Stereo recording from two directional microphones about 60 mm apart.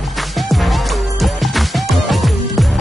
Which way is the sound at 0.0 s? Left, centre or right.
Centre.